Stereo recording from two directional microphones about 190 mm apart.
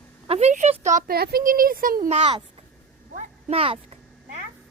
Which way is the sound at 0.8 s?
40° right (ahead or behind).